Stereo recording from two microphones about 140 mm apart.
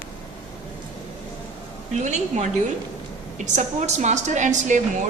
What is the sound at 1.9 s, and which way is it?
A woman's voice, 55° right (ahead or behind).